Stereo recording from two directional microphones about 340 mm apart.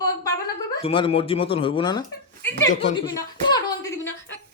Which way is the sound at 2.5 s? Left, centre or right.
Left.